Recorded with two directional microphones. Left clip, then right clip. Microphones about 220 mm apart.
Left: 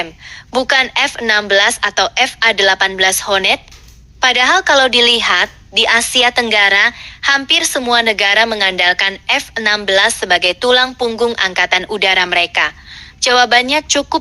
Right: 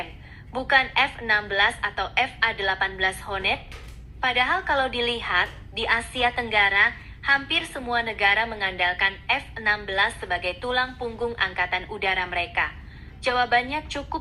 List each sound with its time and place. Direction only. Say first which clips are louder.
0.5 s a woman's voice: left 8 dB; 50° left (ahead or behind)